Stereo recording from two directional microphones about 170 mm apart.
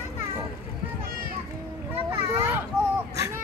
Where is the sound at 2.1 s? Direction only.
20° right (ahead or behind).